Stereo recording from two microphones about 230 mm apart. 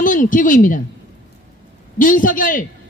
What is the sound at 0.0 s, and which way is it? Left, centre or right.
Speech, left.